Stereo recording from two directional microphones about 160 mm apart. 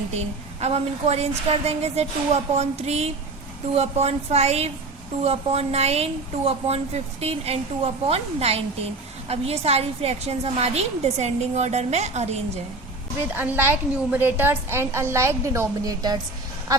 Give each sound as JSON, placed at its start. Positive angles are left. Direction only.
{"t": 0.1, "sound": "a woman's voice", "side_deg": -40}
{"t": 13.3, "sound": "a woman's voice", "side_deg": -15}